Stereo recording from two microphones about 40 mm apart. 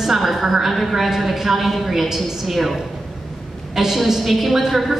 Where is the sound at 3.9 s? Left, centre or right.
Centre.